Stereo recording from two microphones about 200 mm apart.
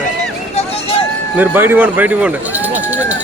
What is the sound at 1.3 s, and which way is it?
Speech, 10° right (ahead or behind).